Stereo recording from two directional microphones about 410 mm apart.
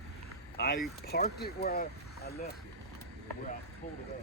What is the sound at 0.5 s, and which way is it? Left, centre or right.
Speech, left.